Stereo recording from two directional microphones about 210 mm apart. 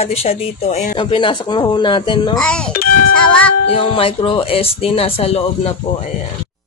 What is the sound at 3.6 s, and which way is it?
Speech, 25° left (ahead or behind).